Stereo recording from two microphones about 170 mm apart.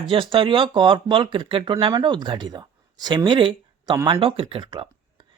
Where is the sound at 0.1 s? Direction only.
30° right (ahead or behind).